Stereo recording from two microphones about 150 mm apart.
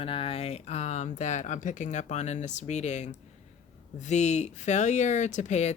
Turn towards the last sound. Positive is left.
turn(degrees=50)  # may be behind; listen again after turning